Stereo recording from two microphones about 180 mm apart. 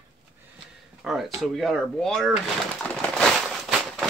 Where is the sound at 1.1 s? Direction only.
Centre (ahead or behind).